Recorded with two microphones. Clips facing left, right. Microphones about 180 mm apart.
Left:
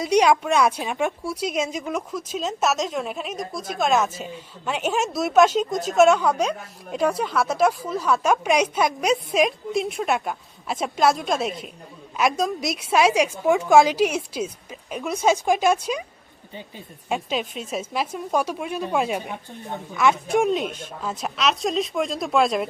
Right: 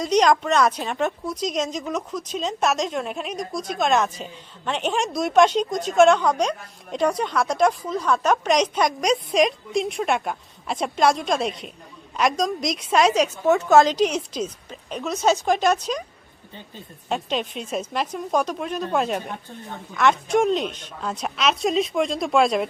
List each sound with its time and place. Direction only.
0.0 s a woman's voice: 10° left (ahead or behind)